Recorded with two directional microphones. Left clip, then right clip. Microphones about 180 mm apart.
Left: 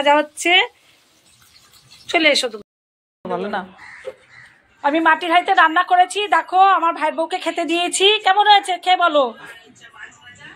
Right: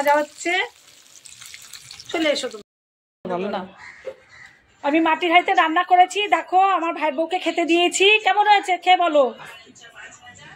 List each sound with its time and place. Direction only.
0.0 s speech: 30° left (ahead or behind)
2.0 s speech: 30° left (ahead or behind)
3.3 s a woman's voice: centre (ahead or behind)
4.8 s a woman's voice: centre (ahead or behind)